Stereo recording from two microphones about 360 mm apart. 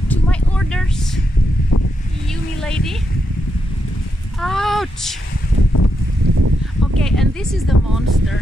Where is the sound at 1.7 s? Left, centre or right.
Left.